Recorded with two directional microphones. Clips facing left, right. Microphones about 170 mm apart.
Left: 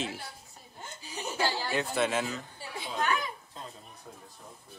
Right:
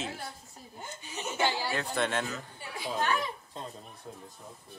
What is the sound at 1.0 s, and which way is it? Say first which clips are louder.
Chuckle: left 1 dB; 35° left (ahead or behind).